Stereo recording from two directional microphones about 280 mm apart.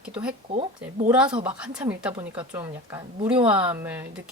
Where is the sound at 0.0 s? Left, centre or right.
Centre.